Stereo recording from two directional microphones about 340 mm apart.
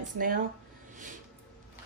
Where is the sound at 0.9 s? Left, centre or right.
Right.